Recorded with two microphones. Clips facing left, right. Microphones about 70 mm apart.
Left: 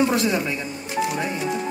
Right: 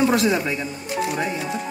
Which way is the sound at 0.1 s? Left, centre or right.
Right.